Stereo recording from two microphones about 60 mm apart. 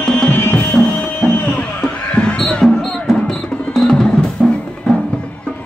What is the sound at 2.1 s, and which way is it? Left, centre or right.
Music, centre.